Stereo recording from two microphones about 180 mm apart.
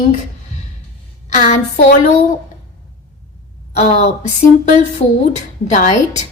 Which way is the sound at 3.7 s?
40° left (ahead or behind).